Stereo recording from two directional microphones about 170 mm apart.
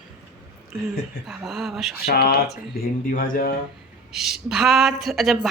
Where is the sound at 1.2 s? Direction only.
Centre (ahead or behind).